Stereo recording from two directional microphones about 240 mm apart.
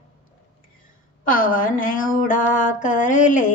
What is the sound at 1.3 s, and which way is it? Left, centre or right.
A woman's voice, left.